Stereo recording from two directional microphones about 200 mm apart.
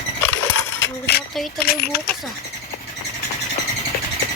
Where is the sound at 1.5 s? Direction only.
50° left (ahead or behind).